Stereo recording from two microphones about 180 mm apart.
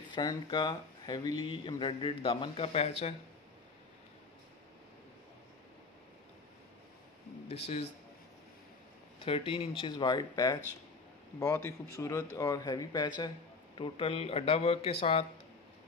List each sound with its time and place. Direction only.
0.1 s a man's voice: 25° left (ahead or behind)
7.4 s speech: 35° left (ahead or behind)
9.2 s a man's voice: 30° left (ahead or behind)